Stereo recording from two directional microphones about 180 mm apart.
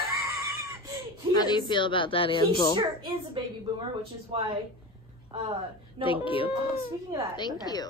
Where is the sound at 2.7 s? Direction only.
25° right (ahead or behind).